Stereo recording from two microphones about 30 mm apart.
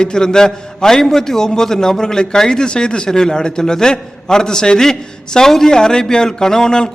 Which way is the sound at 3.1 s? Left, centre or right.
Centre.